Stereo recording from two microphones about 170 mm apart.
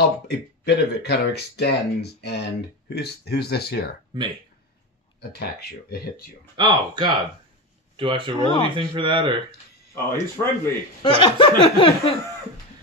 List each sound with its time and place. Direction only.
0.3 s speech: 75° left (ahead or behind)
5.4 s speech: 65° left (ahead or behind)
6.5 s speech: 25° right (ahead or behind)
8.4 s speech: 30° left (ahead or behind)
8.6 s speech: 30° right (ahead or behind)
10.1 s speech: 15° left (ahead or behind)
11.1 s laughter: 30° left (ahead or behind)